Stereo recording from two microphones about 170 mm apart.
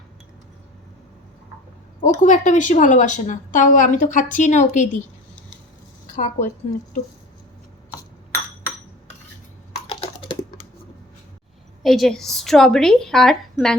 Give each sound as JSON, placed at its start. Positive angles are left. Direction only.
{"t": 2.0, "sound": "a woman's voice", "side_deg": 45}
{"t": 6.1, "sound": "a woman's voice", "side_deg": 45}
{"t": 9.8, "sound": "typing", "side_deg": 30}
{"t": 11.8, "sound": "a woman's voice", "side_deg": 0}